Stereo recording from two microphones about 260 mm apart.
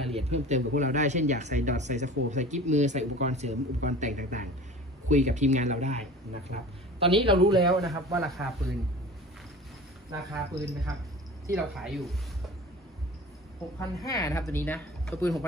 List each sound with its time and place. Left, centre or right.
0.0 s speech: right
8.2 s speech: centre
10.1 s speech: centre
11.5 s speech: centre
13.7 s speech: centre